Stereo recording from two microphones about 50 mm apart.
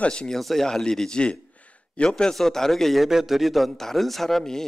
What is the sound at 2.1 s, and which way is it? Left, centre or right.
A man's voice, centre.